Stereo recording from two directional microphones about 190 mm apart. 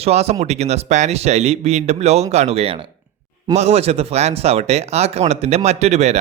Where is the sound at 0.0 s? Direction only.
35° right (ahead or behind).